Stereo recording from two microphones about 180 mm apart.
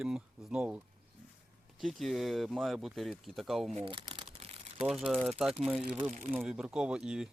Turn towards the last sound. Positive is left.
turn(degrees=-5)  # may be behind; listen again after turning